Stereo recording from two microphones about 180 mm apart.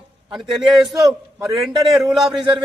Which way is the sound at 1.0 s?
15° right (ahead or behind).